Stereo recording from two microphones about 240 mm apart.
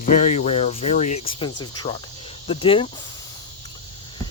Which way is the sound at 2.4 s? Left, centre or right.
Left.